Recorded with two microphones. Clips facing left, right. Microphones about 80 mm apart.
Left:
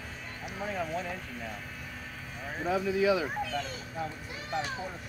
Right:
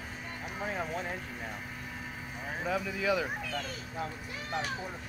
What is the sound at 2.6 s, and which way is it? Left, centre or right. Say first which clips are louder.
Speech: left 5 dB; centre.